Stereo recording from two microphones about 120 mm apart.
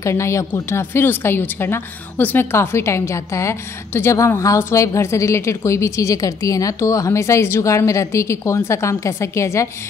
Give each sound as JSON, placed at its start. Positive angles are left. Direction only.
{"t": 0.0, "sound": "a woman's voice", "side_deg": 25}